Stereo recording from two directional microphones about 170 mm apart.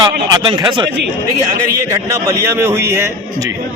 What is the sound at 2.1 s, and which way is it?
Speech, 15° right (ahead or behind).